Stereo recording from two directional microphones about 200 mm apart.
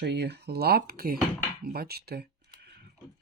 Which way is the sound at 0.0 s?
55° right (ahead or behind).